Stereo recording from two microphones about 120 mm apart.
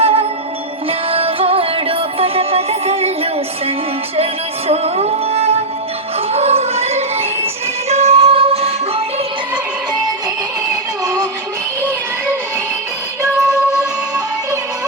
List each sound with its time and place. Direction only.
0.0 s music: 55° right (ahead or behind)
4.7 s music: 60° right (ahead or behind)
10.7 s music: 30° right (ahead or behind)